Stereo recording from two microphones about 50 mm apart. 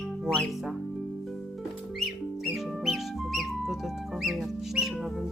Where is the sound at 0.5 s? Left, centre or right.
Centre.